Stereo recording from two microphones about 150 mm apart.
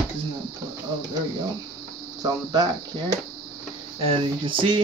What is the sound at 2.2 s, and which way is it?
Speech, 25° right (ahead or behind).